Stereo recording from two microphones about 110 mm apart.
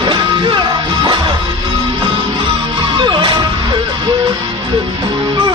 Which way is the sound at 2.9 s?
45° right (ahead or behind).